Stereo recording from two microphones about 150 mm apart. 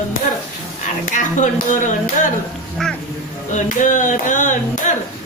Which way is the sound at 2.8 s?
5° left (ahead or behind).